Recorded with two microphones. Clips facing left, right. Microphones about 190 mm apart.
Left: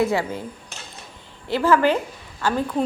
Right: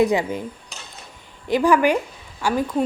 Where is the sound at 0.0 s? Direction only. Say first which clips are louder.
Right 3 dB; 15° right (ahead or behind).